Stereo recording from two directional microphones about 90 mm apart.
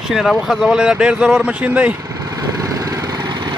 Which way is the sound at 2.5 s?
40° right (ahead or behind).